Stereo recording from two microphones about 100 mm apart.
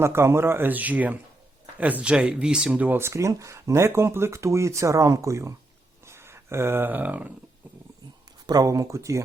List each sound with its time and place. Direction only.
0.0 s speech: 25° right (ahead or behind)
8.4 s speech: 35° right (ahead or behind)